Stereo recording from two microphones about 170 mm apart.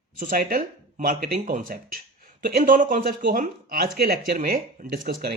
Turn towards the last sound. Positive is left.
turn(degrees=-70)  # may be behind; listen again after turning